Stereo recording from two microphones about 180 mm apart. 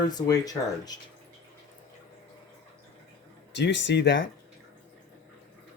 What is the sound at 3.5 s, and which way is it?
Speech, 75° left (ahead or behind).